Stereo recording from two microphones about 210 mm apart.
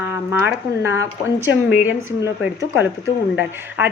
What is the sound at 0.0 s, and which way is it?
A woman's voice, 10° right (ahead or behind).